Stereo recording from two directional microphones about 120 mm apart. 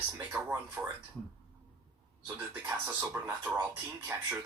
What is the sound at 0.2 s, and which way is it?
Speech, 15° right (ahead or behind).